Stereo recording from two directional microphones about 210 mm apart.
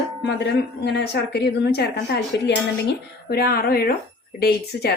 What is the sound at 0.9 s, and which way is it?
Speech, 55° left (ahead or behind).